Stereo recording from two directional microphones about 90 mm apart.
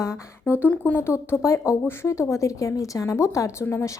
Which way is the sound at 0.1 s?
15° right (ahead or behind).